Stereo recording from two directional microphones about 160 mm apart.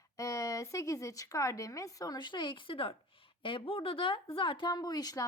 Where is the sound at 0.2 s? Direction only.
20° left (ahead or behind).